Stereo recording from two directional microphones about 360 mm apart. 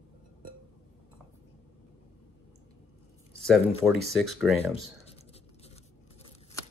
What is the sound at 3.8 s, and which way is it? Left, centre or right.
Speech, centre.